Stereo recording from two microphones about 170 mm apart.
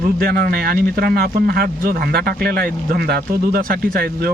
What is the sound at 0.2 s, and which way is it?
Speech, 65° right (ahead or behind).